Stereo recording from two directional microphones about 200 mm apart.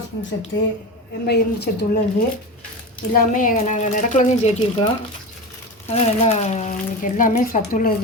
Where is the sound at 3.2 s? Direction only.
40° left (ahead or behind).